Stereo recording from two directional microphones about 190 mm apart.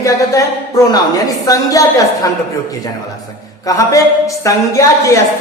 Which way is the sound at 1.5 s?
20° left (ahead or behind).